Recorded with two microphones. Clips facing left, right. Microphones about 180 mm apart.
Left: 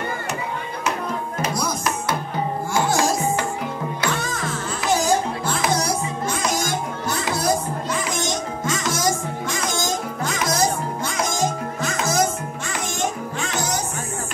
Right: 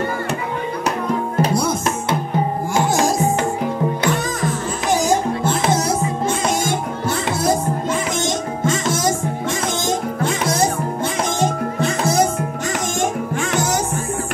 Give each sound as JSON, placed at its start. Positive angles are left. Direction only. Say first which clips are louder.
{"t": 1.4, "sound": "music", "louder": "right 5 dB", "side_deg": -25}
{"t": 8.6, "sound": "music", "louder": "right 4 dB", "side_deg": -25}
{"t": 13.0, "sound": "music", "louder": "right 3 dB", "side_deg": -50}